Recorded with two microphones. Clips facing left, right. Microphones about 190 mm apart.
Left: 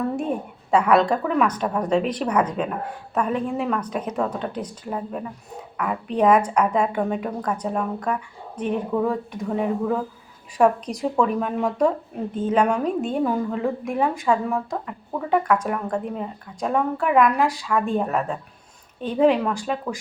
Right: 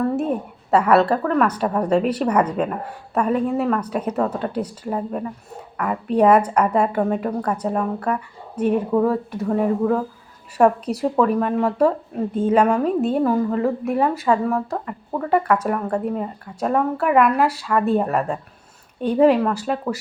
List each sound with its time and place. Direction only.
0.0 s a woman's voice: 5° right (ahead or behind)
13.0 s a woman's voice: 40° right (ahead or behind)
13.2 s a woman's voice: centre (ahead or behind)